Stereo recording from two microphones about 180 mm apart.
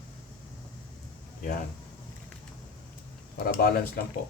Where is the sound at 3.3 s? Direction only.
55° left (ahead or behind).